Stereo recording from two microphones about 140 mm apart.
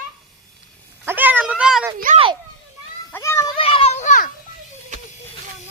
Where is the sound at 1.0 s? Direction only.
15° right (ahead or behind).